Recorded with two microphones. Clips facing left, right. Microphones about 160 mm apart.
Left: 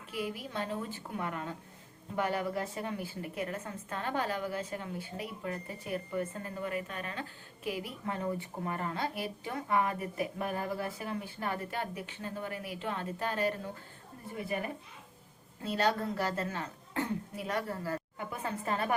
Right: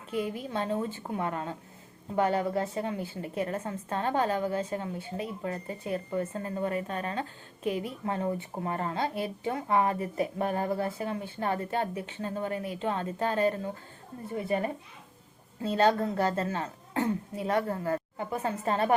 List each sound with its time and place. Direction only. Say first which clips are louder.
0.2 s a woman's voice: right 4 dB; 25° right (ahead or behind)